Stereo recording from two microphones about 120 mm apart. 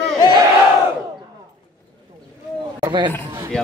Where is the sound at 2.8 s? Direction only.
35° right (ahead or behind).